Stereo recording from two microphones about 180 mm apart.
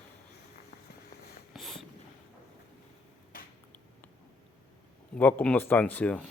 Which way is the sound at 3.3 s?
50° left (ahead or behind).